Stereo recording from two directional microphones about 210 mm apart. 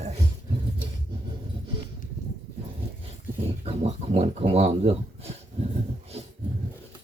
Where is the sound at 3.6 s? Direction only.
30° right (ahead or behind).